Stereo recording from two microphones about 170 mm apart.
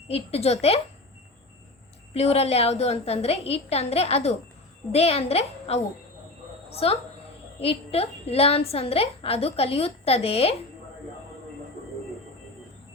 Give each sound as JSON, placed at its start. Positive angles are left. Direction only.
{"t": 0.1, "sound": "a woman's voice", "side_deg": 35}
{"t": 2.1, "sound": "a woman's voice", "side_deg": 35}